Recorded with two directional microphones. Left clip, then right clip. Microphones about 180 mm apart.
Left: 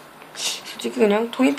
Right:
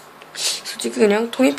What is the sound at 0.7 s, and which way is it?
Speech, 20° right (ahead or behind).